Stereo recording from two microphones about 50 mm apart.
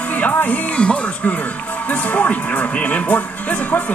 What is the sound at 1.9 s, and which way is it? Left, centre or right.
A man's voice, left.